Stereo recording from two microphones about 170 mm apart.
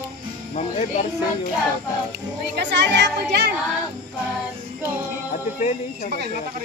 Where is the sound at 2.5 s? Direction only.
90° right.